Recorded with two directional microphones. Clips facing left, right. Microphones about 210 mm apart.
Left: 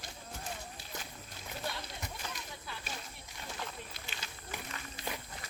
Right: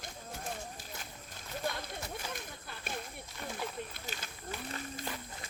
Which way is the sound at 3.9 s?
50° right (ahead or behind).